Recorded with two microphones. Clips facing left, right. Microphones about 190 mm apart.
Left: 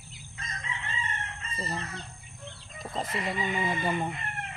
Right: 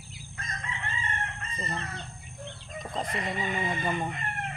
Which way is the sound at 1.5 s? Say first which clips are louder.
Left 2 dB; 5° left (ahead or behind).